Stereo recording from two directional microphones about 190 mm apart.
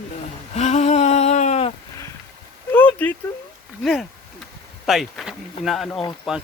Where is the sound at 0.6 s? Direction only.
35° left (ahead or behind).